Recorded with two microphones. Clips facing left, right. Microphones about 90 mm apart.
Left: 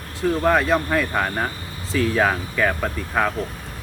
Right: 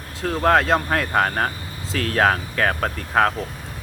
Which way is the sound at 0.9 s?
65° right (ahead or behind).